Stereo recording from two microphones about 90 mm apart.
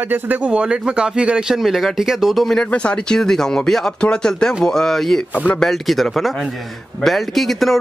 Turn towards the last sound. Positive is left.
turn(degrees=0)  # may be behind; listen again after turning